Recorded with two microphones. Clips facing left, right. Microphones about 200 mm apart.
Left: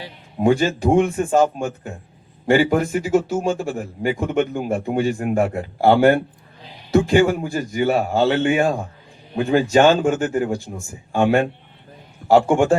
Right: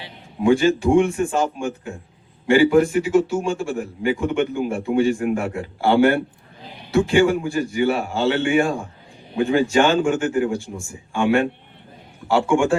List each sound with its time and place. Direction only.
0.0 s speech: 40° left (ahead or behind)
12.5 s speech: 40° left (ahead or behind)